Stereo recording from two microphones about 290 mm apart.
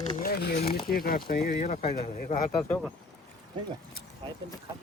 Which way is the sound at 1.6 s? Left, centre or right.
Left.